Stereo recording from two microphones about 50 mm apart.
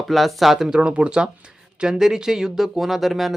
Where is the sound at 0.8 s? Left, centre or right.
Right; by 3.3 s centre.